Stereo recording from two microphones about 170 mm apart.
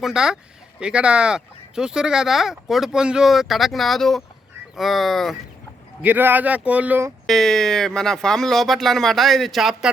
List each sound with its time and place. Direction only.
0.0 s speech: 5° right (ahead or behind)
6.0 s speech: 10° right (ahead or behind)
7.3 s speech: centre (ahead or behind)